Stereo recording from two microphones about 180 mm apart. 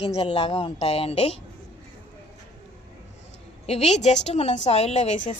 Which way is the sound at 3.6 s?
35° left (ahead or behind).